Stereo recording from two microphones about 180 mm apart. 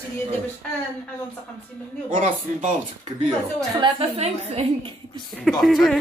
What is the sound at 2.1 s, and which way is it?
Speech, 50° right (ahead or behind).